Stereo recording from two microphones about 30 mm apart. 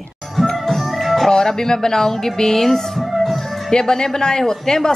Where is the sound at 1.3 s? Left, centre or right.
Centre.